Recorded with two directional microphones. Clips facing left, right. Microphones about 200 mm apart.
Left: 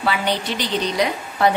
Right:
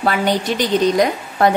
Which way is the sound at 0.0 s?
45° right (ahead or behind).